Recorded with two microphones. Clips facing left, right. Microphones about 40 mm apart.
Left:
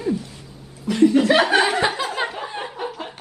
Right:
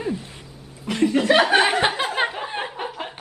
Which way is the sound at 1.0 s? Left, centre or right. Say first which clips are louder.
Left 2 dB; centre.